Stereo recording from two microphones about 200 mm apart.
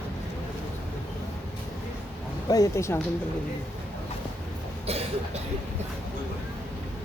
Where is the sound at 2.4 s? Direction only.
15° left (ahead or behind).